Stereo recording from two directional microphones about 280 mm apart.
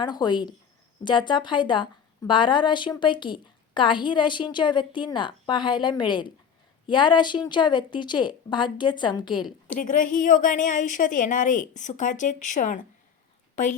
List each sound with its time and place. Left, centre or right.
0.0 s a woman's voice: centre
9.7 s a woman's voice: left